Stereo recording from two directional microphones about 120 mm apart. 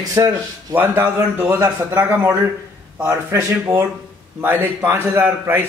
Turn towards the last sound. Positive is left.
turn(degrees=-15)  # may be behind; listen again after turning